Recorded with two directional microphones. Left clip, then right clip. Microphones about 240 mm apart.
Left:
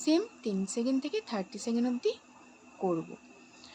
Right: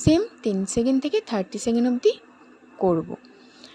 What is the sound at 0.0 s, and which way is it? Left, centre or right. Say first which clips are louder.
A woman's voice: right 8 dB; right.